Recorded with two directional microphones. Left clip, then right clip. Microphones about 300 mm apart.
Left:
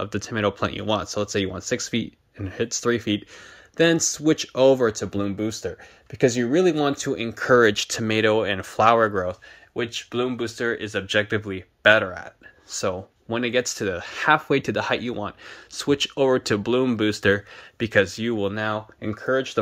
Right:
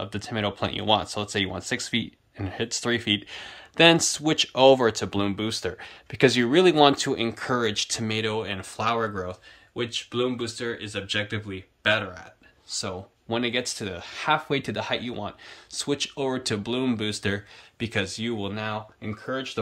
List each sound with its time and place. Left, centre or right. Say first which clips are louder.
0.0 s speech: left 5 dB; centre